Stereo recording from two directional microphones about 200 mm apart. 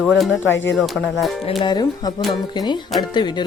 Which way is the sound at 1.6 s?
20° left (ahead or behind).